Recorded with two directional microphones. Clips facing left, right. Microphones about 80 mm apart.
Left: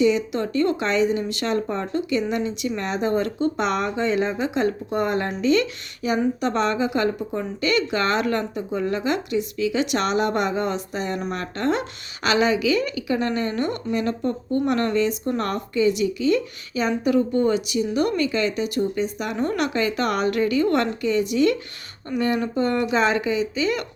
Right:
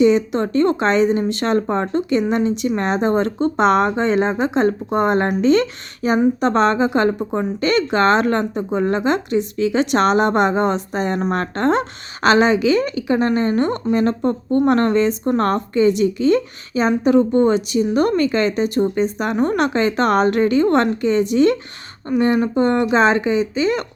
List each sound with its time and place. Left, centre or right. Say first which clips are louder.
0.0 s a woman's voice: right 5 dB; right